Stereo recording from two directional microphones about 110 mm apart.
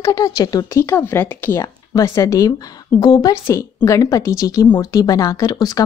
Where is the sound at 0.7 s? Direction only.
20° left (ahead or behind).